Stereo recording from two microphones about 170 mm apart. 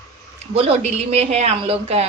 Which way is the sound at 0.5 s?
35° right (ahead or behind).